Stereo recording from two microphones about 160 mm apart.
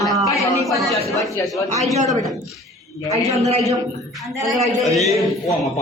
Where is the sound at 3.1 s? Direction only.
45° right (ahead or behind).